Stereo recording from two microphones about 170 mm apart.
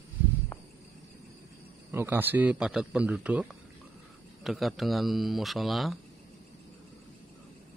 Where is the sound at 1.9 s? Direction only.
10° right (ahead or behind).